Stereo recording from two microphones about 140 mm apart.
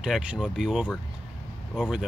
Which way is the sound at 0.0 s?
5° right (ahead or behind).